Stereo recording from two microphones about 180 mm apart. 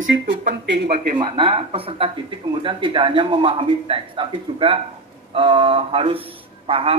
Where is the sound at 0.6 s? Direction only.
70° right (ahead or behind).